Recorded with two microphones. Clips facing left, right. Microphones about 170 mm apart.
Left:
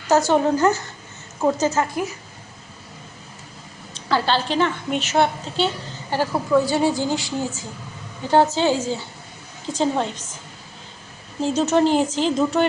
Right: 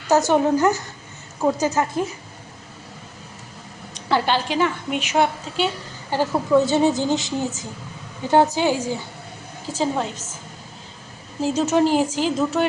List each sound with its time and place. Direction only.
0.1 s a woman's voice: 20° right (ahead or behind)
4.1 s a woman's voice: 15° right (ahead or behind)
11.3 s a woman's voice: 5° right (ahead or behind)